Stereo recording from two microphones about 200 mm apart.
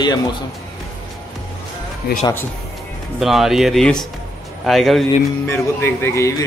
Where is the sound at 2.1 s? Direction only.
50° left (ahead or behind).